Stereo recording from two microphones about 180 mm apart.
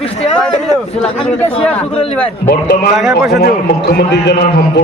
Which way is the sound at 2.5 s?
60° left (ahead or behind).